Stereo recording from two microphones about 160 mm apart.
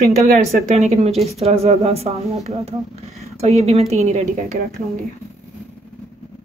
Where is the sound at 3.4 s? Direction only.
40° right (ahead or behind).